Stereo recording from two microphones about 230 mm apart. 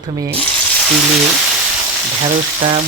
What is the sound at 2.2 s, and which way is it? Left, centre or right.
Frying, right.